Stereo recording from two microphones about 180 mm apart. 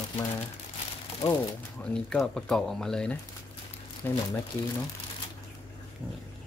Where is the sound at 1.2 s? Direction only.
25° left (ahead or behind).